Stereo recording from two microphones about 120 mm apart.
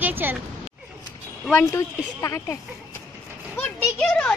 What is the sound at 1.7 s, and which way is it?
Speech, 25° left (ahead or behind).